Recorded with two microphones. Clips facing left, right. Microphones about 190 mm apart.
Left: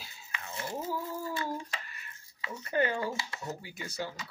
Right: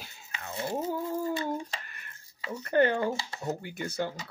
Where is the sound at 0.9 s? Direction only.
60° right (ahead or behind).